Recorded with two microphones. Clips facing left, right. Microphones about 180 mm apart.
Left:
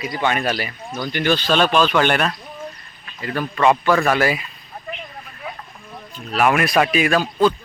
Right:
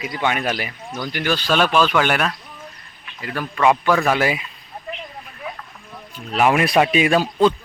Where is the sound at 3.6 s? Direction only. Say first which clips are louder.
Even; 10° right (ahead or behind).